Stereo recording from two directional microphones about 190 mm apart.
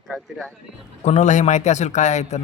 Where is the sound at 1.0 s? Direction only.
40° left (ahead or behind).